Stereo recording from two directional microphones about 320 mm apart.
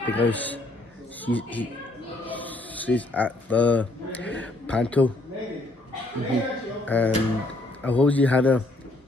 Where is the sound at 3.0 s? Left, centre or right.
Centre.